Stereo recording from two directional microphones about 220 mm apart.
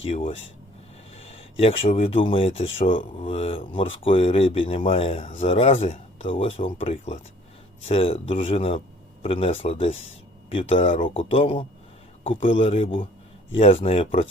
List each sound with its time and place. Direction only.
0.0 s speech: 25° left (ahead or behind)